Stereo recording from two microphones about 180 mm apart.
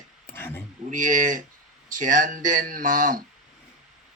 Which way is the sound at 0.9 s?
45° right (ahead or behind).